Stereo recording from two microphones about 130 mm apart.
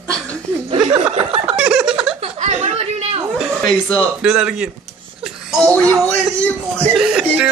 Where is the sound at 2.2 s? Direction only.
60° right (ahead or behind).